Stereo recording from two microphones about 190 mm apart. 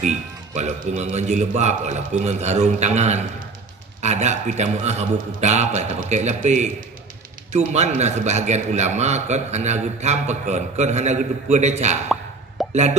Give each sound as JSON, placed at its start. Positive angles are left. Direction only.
{"t": 0.0, "sound": "a man's voice", "side_deg": -40}